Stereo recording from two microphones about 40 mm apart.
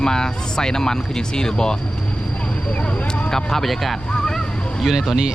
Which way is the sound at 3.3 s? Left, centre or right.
Centre.